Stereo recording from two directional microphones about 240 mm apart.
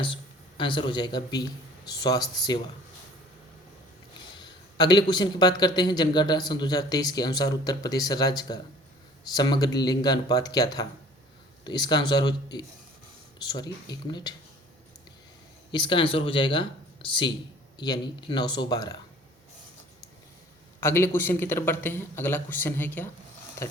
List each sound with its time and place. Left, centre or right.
0.0 s a sound: left
1.9 s a man's voice: centre
4.4 s a man's voice: centre
15.7 s a man's voice: centre
20.8 s a man's voice: centre